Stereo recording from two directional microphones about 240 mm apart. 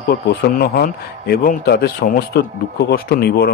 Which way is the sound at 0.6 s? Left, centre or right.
Left.